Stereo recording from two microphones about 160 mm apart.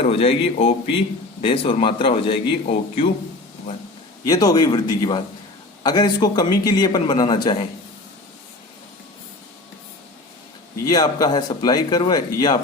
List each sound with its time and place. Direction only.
0.0 s a man's voice: 35° left (ahead or behind)
4.3 s a man's voice: 25° left (ahead or behind)
10.8 s a man's voice: 25° left (ahead or behind)